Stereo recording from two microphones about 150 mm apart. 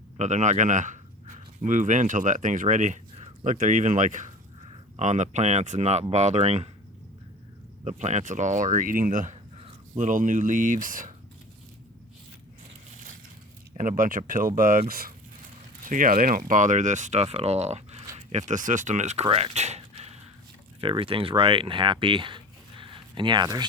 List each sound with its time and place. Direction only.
0.2 s speech: 50° right (ahead or behind)
4.6 s a sound: 40° right (ahead or behind)
5.0 s speech: 50° right (ahead or behind)
7.9 s speech: 55° right (ahead or behind)
13.7 s speech: 60° right (ahead or behind)
15.8 s speech: 65° right (ahead or behind)
19.4 s a sound: 50° right (ahead or behind)
20.8 s speech: 35° right (ahead or behind)